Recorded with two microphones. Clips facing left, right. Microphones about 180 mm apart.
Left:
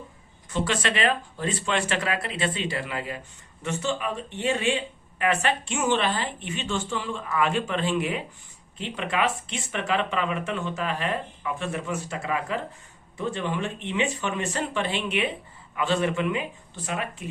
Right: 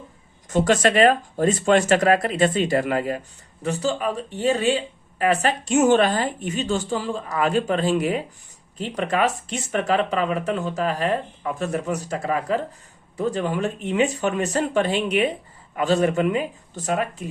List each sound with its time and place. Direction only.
0.5 s speech: 45° right (ahead or behind)